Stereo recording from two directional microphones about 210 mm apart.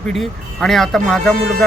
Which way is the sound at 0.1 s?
Centre (ahead or behind).